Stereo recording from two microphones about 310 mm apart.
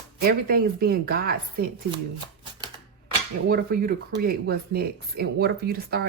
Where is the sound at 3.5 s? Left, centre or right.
Right.